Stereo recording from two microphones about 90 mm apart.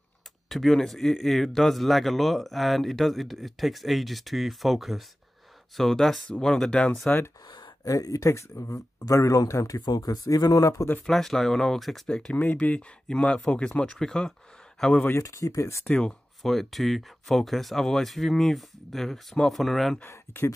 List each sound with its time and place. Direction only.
0.5 s speech: centre (ahead or behind)
7.4 s a sound: 65° left (ahead or behind)
7.8 s speech: 40° left (ahead or behind)
11.1 s speech: 5° left (ahead or behind)
15.0 s speech: 35° left (ahead or behind)
15.8 s speech: 10° left (ahead or behind)
20.0 s speech: 30° left (ahead or behind)